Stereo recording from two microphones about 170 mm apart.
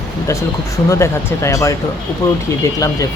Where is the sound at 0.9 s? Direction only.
15° left (ahead or behind).